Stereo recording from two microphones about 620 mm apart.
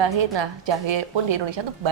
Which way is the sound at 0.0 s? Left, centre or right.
Right.